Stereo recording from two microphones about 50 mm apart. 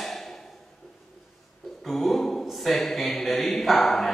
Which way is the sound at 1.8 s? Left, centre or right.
Centre.